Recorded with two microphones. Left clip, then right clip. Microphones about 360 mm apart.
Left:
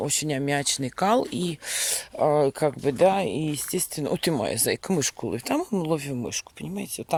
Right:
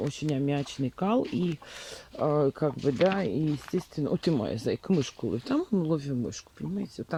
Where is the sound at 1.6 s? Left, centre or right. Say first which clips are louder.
Left 13 dB; left.